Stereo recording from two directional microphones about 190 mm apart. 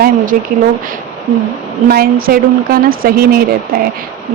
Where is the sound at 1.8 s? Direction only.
50° right (ahead or behind).